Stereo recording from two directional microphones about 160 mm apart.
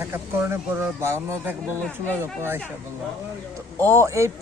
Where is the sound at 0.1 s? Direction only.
15° right (ahead or behind).